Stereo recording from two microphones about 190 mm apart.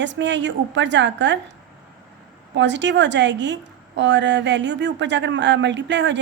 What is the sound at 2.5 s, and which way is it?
A woman's voice, 70° right (ahead or behind).